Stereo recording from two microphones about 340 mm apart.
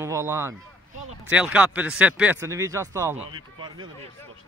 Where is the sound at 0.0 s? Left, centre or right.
Centre.